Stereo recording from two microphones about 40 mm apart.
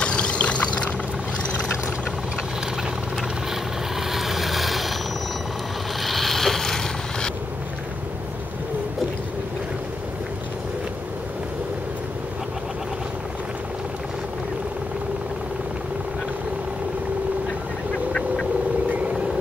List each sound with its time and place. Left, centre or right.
0.0 s vehicle: left
4.1 s vehicle: centre
5.9 s rub: centre
18.1 s duck: centre
18.9 s vehicle: right